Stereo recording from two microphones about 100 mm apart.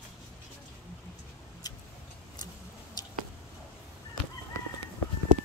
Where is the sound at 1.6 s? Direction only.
40° left (ahead or behind).